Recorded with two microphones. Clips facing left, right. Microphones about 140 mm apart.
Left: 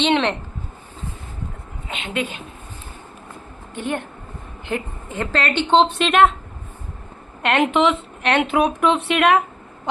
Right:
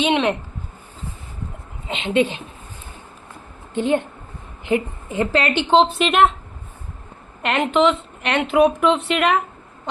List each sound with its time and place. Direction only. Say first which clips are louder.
0.0 s a woman's voice: even; 5° right (ahead or behind)
1.9 s a woman's voice: right 7 dB; 25° right (ahead or behind)
3.8 s a woman's voice: right 7 dB; 20° right (ahead or behind); by 6.2 s 5° right (ahead or behind)
7.4 s speech: even; centre (ahead or behind)